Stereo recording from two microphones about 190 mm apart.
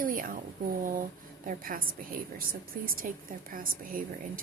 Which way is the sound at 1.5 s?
50° right (ahead or behind).